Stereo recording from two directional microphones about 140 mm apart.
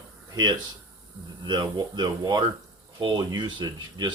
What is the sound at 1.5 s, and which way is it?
Speech, 30° right (ahead or behind).